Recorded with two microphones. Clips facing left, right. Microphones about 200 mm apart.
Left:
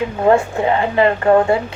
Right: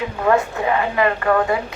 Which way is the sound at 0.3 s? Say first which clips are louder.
Left 3 dB; 30° left (ahead or behind).